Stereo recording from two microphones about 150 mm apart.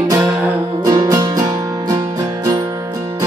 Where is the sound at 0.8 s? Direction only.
25° right (ahead or behind).